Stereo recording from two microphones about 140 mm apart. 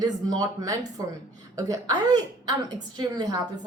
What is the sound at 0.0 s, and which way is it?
A woman's voice, 30° right (ahead or behind).